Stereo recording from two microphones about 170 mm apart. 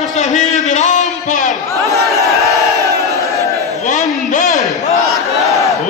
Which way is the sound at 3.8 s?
50° left (ahead or behind).